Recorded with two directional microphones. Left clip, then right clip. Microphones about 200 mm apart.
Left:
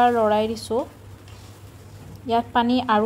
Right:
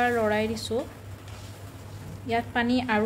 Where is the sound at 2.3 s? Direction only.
25° left (ahead or behind).